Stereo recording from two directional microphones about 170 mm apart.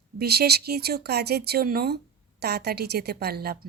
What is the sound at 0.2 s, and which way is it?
Speech, 70° right (ahead or behind).